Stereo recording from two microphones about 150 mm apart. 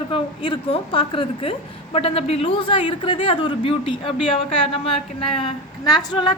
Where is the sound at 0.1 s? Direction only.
35° left (ahead or behind).